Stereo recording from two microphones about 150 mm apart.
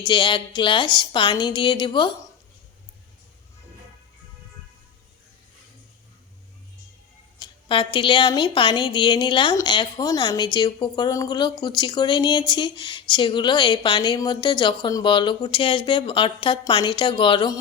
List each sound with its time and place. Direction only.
0.1 s speech: 30° left (ahead or behind)
7.3 s a woman's voice: 30° left (ahead or behind)